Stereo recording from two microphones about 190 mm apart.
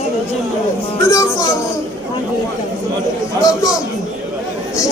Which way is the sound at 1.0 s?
15° left (ahead or behind).